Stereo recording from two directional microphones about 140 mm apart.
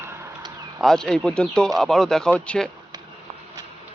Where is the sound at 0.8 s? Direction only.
5° left (ahead or behind).